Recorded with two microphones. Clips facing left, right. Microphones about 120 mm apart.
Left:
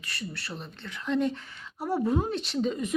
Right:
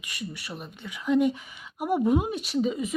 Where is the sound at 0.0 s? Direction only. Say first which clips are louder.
Right 1 dB; 15° right (ahead or behind).